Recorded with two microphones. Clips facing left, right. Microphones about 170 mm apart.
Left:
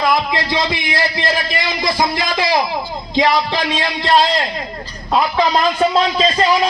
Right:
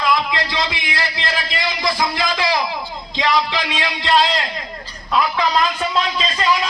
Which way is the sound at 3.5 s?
40° left (ahead or behind).